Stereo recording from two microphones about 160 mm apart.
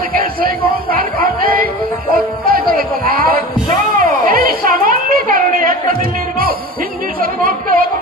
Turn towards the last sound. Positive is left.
turn(degrees=-60)  # may be behind; listen again after turning